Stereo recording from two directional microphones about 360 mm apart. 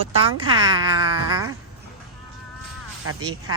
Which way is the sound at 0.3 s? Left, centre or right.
Centre.